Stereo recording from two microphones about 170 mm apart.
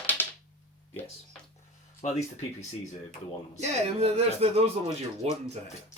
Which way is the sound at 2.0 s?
40° left (ahead or behind).